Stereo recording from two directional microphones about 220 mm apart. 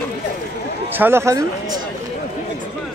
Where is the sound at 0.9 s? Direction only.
10° right (ahead or behind).